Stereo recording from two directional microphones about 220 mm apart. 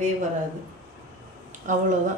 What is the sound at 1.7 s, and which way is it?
Speech, 35° right (ahead or behind).